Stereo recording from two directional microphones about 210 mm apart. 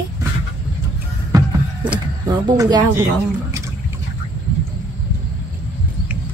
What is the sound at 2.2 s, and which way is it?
Speech, 20° right (ahead or behind).